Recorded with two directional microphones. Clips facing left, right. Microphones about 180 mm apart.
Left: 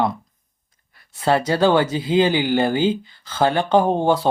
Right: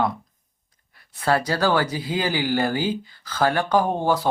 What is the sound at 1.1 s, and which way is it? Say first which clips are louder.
Speech: left 4 dB; 25° left (ahead or behind).